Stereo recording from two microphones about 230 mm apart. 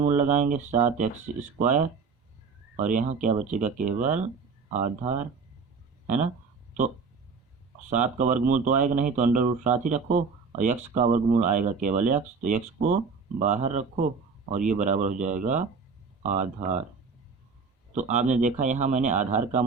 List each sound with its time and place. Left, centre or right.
0.2 s speech: right
7.9 s speech: right
17.9 s speech: right